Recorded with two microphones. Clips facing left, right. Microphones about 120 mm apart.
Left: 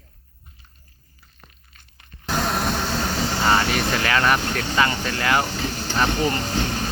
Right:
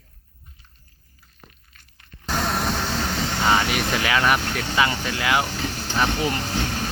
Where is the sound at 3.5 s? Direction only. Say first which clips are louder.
Even; 10° right (ahead or behind).